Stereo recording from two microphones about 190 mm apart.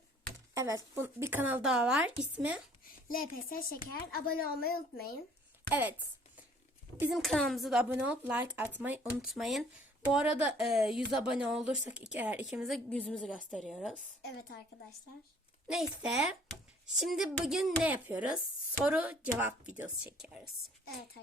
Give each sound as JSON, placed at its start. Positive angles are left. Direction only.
{"t": 0.5, "sound": "speech", "side_deg": -15}
{"t": 2.8, "sound": "speech", "side_deg": 50}
{"t": 7.0, "sound": "speech", "side_deg": 0}
{"t": 15.6, "sound": "speech", "side_deg": 0}